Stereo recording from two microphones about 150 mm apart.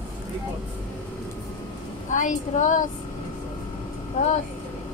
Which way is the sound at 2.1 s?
55° left (ahead or behind).